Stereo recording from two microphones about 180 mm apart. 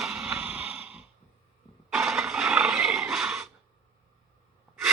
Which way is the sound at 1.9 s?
Centre (ahead or behind).